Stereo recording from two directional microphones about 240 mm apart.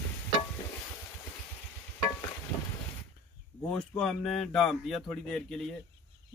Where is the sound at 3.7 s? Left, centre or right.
Centre.